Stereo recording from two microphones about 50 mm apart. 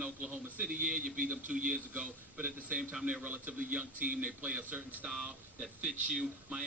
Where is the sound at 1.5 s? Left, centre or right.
Centre.